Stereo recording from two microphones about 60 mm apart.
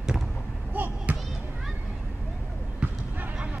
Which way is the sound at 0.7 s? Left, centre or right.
Right.